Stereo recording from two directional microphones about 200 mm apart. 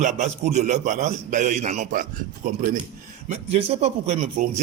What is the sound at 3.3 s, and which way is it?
A man's voice, 30° right (ahead or behind).